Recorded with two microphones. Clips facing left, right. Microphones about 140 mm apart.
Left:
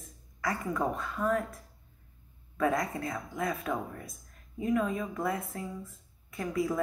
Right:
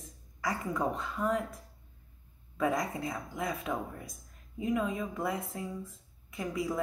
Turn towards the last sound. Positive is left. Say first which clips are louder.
# left 3 dB
turn(degrees=-15)  # may be behind; listen again after turning